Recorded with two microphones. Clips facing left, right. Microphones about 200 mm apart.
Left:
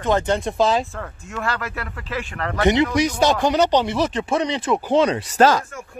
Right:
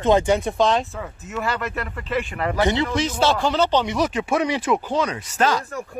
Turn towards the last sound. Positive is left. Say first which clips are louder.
# left 5 dB
turn(degrees=35)  # may be behind; listen again after turning